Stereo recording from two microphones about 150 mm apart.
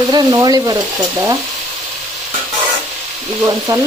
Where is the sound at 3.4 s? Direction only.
25° right (ahead or behind).